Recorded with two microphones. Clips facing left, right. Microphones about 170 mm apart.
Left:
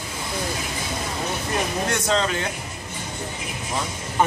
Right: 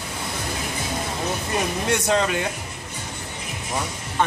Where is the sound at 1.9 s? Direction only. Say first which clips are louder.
Right 4 dB; 10° right (ahead or behind).